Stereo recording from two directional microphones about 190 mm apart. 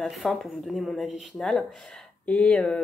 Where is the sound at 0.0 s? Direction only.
Centre (ahead or behind).